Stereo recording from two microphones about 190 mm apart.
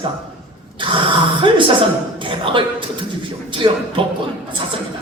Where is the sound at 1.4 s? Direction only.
25° right (ahead or behind).